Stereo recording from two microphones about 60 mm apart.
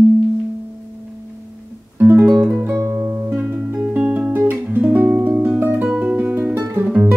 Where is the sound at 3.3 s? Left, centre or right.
Centre.